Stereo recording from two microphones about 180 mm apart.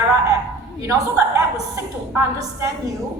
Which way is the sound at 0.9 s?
20° right (ahead or behind).